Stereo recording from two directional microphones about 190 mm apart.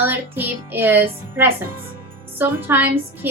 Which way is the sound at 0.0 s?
10° right (ahead or behind).